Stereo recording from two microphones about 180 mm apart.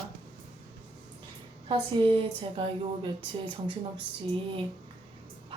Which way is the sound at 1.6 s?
30° right (ahead or behind).